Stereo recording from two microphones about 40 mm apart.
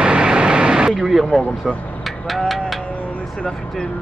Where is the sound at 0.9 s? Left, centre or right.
Centre.